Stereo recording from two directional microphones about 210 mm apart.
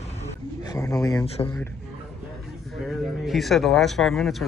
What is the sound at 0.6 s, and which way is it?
Speech, 15° left (ahead or behind).